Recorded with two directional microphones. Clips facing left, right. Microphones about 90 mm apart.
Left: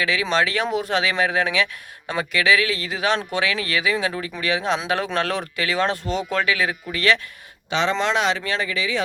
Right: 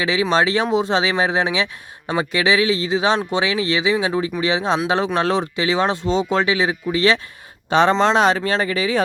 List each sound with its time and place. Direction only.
0.0 s speech: 25° right (ahead or behind)
5.0 s speech: 15° right (ahead or behind)
7.7 s speech: 45° right (ahead or behind)
7.9 s speech: 35° right (ahead or behind)